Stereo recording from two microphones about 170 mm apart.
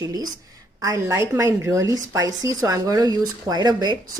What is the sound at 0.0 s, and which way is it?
A woman's voice, 20° right (ahead or behind).